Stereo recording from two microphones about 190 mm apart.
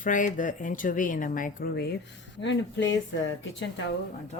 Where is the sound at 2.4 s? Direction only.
70° left (ahead or behind).